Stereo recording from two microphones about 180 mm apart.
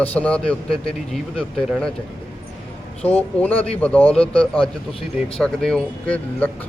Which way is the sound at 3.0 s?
10° left (ahead or behind).